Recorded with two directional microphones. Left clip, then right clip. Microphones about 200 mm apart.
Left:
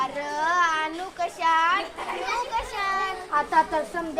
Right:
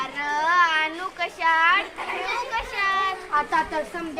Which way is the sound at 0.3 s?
25° left (ahead or behind).